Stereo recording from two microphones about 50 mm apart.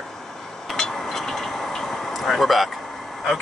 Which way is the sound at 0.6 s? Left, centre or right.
Centre.